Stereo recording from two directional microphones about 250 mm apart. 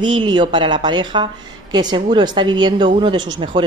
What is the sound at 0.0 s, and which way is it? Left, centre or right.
A woman's voice, centre.